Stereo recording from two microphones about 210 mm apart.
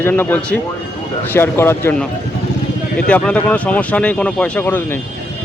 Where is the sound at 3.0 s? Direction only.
5° left (ahead or behind).